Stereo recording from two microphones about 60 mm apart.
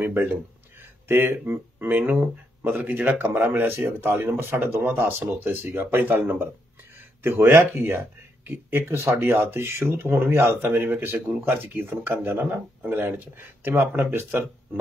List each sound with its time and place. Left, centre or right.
0.0 s speech: right
7.5 s speech: right